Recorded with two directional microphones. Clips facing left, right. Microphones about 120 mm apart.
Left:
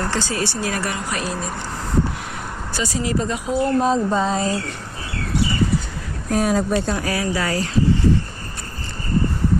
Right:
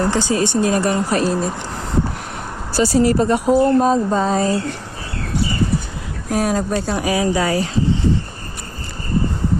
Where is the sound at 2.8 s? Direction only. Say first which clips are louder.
Right 8 dB; 40° right (ahead or behind).